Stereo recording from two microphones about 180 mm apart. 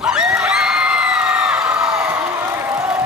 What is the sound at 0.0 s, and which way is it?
Crowd, 5° right (ahead or behind).